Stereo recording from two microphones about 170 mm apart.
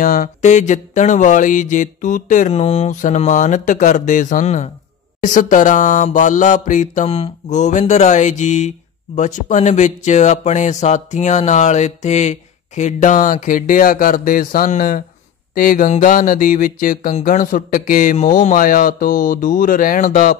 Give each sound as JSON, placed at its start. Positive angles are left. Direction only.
{"t": 0.0, "sound": "mantra", "side_deg": 55}